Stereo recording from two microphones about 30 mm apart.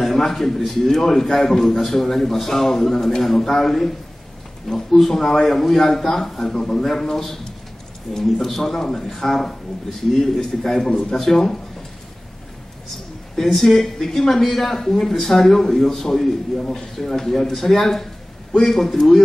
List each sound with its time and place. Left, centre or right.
0.0 s a man's voice: centre
6.4 s a man's voice: left
6.7 s a man's voice: centre
13.4 s a man's voice: centre